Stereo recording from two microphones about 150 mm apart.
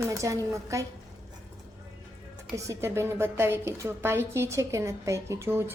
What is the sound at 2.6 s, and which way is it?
A woman's voice, 20° right (ahead or behind).